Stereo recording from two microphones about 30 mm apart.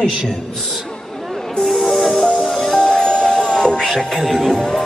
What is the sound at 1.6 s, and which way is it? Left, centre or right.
Music, centre.